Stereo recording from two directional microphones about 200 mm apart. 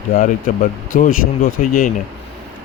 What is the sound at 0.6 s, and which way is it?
Speech, 45° left (ahead or behind).